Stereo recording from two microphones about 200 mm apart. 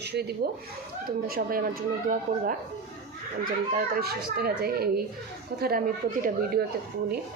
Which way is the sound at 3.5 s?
50° right (ahead or behind).